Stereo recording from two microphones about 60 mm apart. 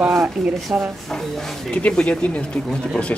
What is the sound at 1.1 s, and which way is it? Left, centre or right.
Speech, centre.